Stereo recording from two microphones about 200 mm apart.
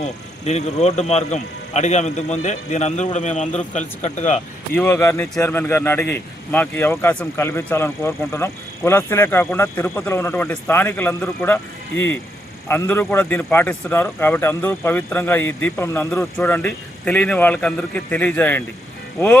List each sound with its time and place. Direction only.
0.0 s speech: 35° left (ahead or behind)
4.7 s a man's voice: 10° left (ahead or behind)